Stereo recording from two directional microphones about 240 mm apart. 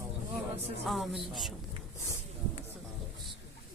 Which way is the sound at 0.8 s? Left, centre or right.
Centre.